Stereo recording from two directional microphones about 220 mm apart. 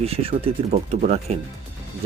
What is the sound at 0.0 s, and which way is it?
Speech, 25° right (ahead or behind).